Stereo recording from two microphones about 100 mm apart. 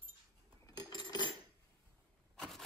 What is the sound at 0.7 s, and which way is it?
Cutlery, 45° left (ahead or behind).